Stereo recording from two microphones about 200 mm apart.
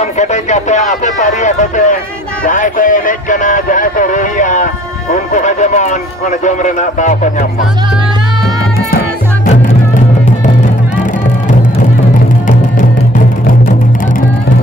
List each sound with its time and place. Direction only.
0.0 s speech: 35° left (ahead or behind)